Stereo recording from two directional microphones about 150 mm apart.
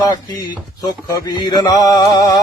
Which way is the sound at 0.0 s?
25° left (ahead or behind).